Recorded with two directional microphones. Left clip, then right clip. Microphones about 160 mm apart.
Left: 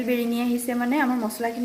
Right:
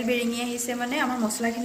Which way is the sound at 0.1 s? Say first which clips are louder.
Left 2 dB; 50° left (ahead or behind).